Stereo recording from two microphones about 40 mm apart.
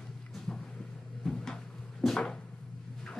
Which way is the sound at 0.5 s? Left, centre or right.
Centre.